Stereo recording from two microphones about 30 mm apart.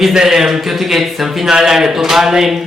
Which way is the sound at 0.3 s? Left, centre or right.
Centre.